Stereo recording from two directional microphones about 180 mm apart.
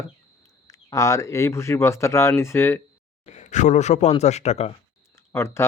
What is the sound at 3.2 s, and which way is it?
Speech, 40° left (ahead or behind).